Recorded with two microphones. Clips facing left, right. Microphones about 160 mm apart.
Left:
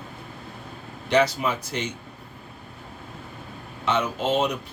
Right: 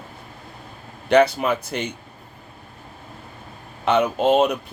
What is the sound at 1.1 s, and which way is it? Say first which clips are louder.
Speech: right 5 dB; 60° right (ahead or behind).